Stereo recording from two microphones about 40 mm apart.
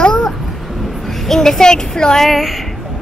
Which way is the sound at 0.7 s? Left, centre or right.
Centre.